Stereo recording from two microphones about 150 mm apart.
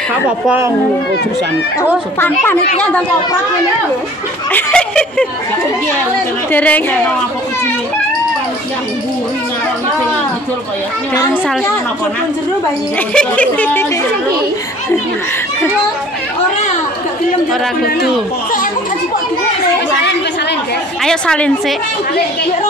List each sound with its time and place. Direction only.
0.5 s a child's voice: 15° right (ahead or behind)
2.1 s speech: 15° left (ahead or behind)
4.5 s speech: 10° left (ahead or behind)
6.5 s speech: 10° left (ahead or behind)
13.1 s speech: 10° left (ahead or behind)
21.0 s a woman's voice: 5° left (ahead or behind)